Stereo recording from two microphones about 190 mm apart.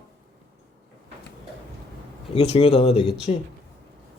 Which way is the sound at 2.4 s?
30° left (ahead or behind).